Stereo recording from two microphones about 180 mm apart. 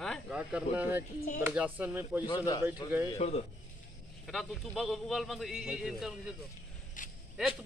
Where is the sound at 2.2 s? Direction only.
25° left (ahead or behind).